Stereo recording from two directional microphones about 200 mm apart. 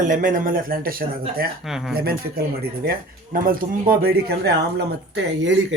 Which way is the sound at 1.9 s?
50° right (ahead or behind).